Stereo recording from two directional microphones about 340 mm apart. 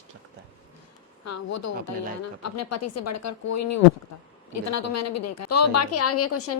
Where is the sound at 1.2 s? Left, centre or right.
Left.